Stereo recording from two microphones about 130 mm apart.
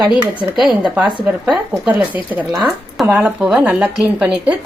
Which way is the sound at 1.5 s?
10° right (ahead or behind).